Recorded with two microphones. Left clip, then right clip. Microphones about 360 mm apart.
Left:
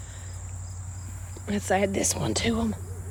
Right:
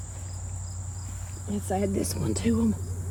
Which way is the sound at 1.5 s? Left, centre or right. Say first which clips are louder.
Left 5 dB; centre.